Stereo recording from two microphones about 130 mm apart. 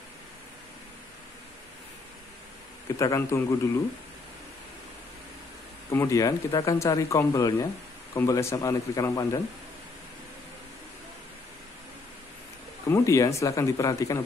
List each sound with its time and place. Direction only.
3.0 s speech: 25° left (ahead or behind)
5.9 s speech: 20° left (ahead or behind)
12.9 s speech: 25° left (ahead or behind)